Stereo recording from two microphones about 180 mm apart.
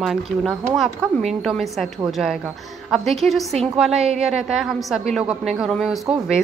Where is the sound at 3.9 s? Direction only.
35° right (ahead or behind).